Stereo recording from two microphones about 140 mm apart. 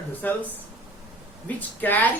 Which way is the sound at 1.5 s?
15° left (ahead or behind).